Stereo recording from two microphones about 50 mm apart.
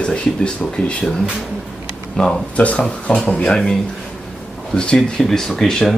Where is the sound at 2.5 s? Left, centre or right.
Left.